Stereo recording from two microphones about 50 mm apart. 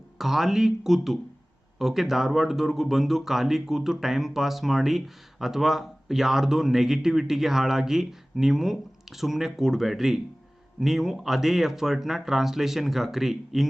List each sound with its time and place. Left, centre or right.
0.2 s speech: centre